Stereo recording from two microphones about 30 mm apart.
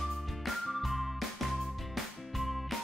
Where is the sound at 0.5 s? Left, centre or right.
Centre.